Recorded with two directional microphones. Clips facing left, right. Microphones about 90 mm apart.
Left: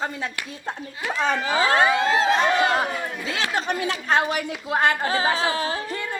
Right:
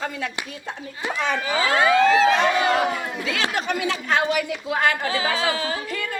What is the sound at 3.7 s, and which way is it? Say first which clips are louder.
Speech: even; 35° left (ahead or behind).